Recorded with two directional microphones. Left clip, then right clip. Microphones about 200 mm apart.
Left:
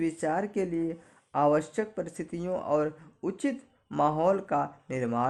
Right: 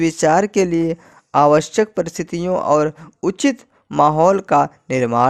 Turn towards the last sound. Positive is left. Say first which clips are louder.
# right 14 dB
turn(degrees=-40)  # may be behind; listen again after turning